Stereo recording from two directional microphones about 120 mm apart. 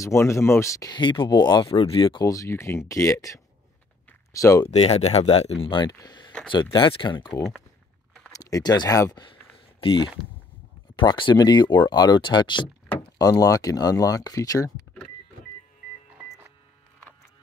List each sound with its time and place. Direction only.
0.0 s speech: 25° left (ahead or behind)
0.9 s speech: 40° left (ahead or behind)
1.7 s speech: 50° left (ahead or behind)
2.2 s speech: 25° left (ahead or behind)
4.6 s speech: 60° left (ahead or behind)
5.7 s speech: 35° left (ahead or behind)
8.3 s speech: 30° left (ahead or behind)
9.2 s a sound: 45° left (ahead or behind)
11.0 s speech: 40° left (ahead or behind)
12.8 s vehicle: 10° left (ahead or behind)
13.2 s speech: 30° left (ahead or behind)